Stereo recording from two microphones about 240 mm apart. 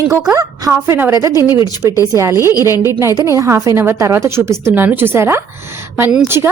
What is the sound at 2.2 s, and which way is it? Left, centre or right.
A woman's voice, centre.